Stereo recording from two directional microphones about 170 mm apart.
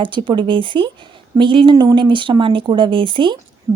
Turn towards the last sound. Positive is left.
turn(degrees=-30)  # may be behind; listen again after turning